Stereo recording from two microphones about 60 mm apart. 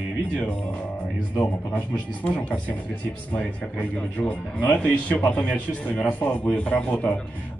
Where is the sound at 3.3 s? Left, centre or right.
Left.